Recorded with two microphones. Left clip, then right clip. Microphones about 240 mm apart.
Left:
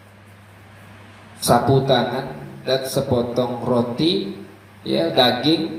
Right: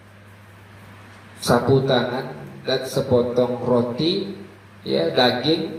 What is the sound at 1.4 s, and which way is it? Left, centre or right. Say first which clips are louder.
A man's voice: left 2 dB; left.